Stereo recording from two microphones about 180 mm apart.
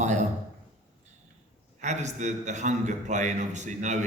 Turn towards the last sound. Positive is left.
turn(degrees=-40)  # may be behind; listen again after turning